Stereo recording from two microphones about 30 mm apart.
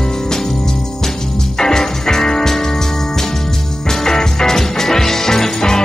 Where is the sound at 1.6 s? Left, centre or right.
Centre.